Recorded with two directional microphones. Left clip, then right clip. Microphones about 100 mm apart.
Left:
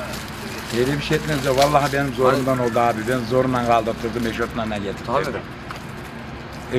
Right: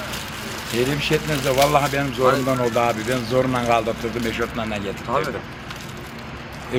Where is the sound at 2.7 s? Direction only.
15° right (ahead or behind).